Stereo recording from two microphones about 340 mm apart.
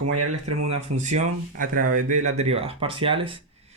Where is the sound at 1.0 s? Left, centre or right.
Right.